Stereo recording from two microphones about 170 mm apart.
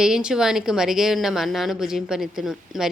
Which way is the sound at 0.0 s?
5° right (ahead or behind).